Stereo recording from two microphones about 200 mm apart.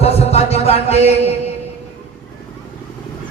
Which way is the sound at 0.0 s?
30° left (ahead or behind).